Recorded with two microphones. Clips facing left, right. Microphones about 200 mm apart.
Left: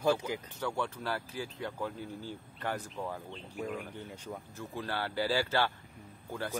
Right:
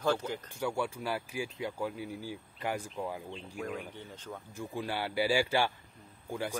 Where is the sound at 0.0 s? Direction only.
10° left (ahead or behind).